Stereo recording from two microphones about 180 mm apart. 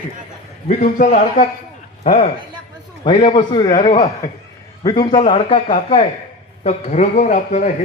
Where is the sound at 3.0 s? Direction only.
25° left (ahead or behind).